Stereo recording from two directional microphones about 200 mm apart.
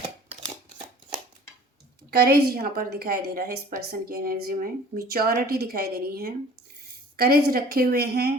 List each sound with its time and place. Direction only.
2.0 s a woman's voice: 50° right (ahead or behind)